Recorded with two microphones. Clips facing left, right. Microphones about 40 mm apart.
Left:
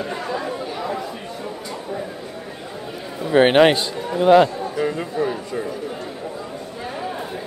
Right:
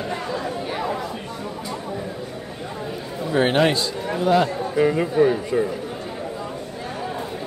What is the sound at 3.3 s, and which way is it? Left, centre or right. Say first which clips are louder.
Speech: left 5 dB; left.